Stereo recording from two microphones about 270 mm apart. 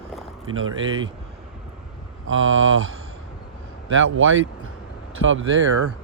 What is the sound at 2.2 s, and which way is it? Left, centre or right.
Speech, right.